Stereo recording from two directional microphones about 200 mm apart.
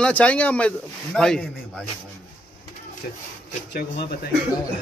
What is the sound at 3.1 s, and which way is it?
Speech, 45° left (ahead or behind).